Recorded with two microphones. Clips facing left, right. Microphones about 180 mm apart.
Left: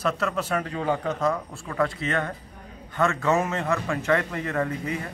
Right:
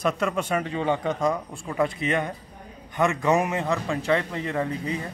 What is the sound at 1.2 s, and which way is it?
Speech, 15° right (ahead or behind).